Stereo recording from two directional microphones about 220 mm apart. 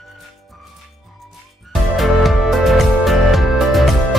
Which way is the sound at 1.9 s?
Centre (ahead or behind).